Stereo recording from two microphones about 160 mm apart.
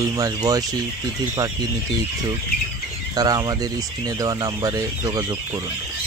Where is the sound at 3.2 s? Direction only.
25° right (ahead or behind).